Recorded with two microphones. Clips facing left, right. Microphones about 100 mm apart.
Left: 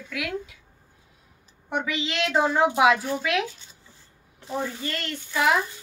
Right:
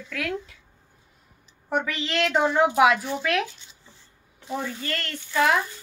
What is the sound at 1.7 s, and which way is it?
Speech, 15° left (ahead or behind).